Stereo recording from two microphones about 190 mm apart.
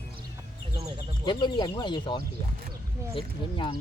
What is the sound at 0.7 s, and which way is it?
Speech, 30° right (ahead or behind).